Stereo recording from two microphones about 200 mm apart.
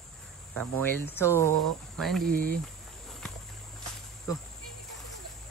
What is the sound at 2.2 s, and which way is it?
Speech, 45° right (ahead or behind).